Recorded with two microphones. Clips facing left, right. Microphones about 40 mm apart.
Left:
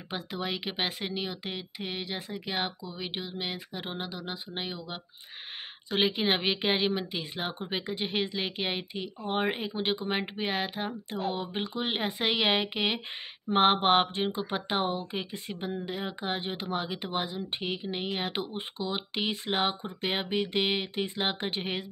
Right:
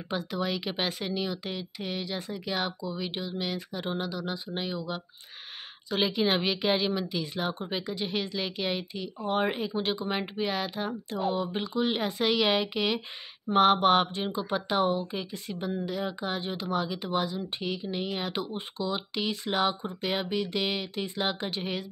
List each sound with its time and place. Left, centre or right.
0.1 s speech: left
5.9 s speech: left